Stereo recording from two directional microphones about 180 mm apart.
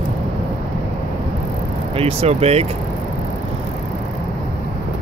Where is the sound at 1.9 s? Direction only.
35° right (ahead or behind).